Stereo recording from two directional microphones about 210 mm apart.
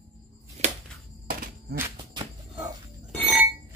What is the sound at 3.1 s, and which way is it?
Burping, centre (ahead or behind).